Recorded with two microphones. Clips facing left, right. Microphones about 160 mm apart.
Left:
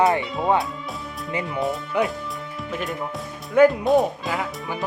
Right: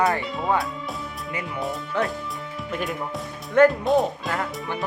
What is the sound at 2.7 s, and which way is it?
Speech, centre (ahead or behind).